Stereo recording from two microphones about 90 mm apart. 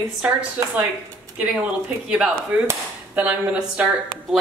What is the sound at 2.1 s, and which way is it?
A woman's voice, 10° right (ahead or behind).